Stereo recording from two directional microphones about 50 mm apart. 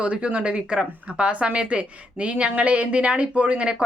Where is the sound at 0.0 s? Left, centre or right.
Right.